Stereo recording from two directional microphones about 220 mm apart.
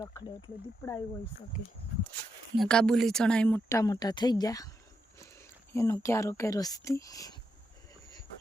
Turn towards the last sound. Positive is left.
turn(degrees=15)  # may be behind; listen again after turning